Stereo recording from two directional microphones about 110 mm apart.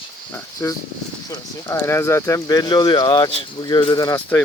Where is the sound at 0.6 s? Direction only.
25° left (ahead or behind).